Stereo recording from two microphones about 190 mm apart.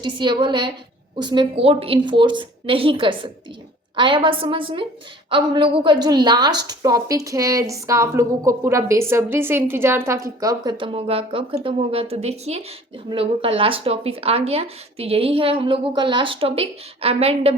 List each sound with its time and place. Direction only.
0.0 s a woman's voice: 25° right (ahead or behind)